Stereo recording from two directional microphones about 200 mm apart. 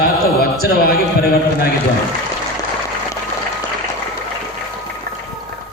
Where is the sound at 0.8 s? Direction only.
50° left (ahead or behind).